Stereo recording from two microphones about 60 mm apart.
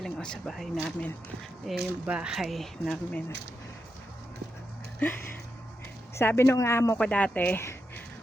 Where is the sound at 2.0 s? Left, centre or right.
Centre.